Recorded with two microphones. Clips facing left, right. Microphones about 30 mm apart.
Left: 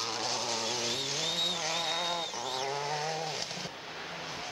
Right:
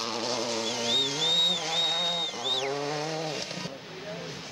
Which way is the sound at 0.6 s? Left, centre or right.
Right.